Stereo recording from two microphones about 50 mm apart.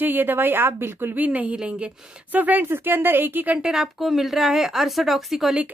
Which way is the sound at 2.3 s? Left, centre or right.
Right.